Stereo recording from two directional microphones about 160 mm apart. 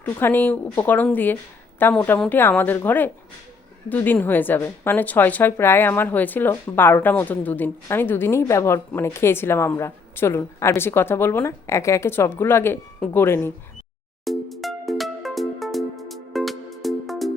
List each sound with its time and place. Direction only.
0.0 s a woman's voice: 10° left (ahead or behind)
14.3 s music: centre (ahead or behind)